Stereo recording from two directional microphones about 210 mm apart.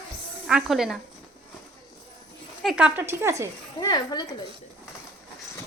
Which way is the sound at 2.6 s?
5° right (ahead or behind).